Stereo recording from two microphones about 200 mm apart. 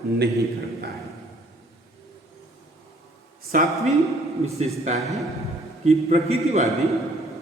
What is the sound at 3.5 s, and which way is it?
Speech, 45° right (ahead or behind).